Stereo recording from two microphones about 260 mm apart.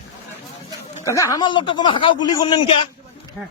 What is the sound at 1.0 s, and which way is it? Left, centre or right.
Speech, centre.